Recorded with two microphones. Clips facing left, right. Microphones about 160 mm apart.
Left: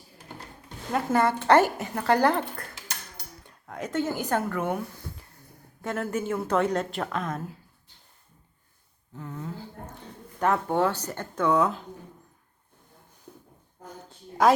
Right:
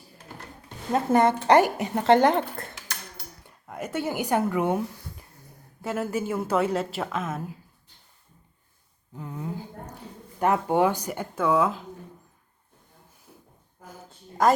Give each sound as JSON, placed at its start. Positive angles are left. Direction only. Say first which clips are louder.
{"t": 0.9, "sound": "a woman's voice", "louder": "right 3 dB", "side_deg": -20}
{"t": 3.4, "sound": "speech", "louder": "even", "side_deg": -10}
{"t": 5.8, "sound": "a woman's voice", "louder": "right 1 dB", "side_deg": -10}
{"t": 9.1, "sound": "a sound", "louder": "right 2 dB", "side_deg": -15}
{"t": 10.4, "sound": "a woman's voice", "louder": "right 2 dB", "side_deg": -15}
{"t": 13.8, "sound": "a sound", "louder": "left 2 dB", "side_deg": -5}